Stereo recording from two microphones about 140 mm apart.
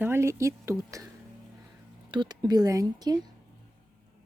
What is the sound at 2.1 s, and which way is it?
Speech, 35° right (ahead or behind).